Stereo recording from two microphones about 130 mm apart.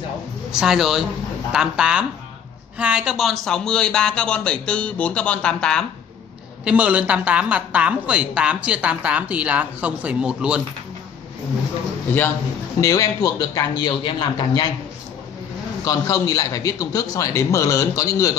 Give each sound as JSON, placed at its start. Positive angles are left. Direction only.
{"t": 0.5, "sound": "speech", "side_deg": -5}
{"t": 6.6, "sound": "a woman's voice", "side_deg": -10}
{"t": 12.8, "sound": "a man's voice", "side_deg": 25}
{"t": 15.8, "sound": "a man's voice", "side_deg": 30}